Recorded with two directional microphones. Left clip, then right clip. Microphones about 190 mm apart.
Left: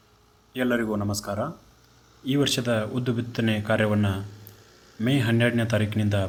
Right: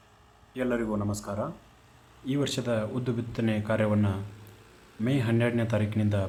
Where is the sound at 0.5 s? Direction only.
10° left (ahead or behind).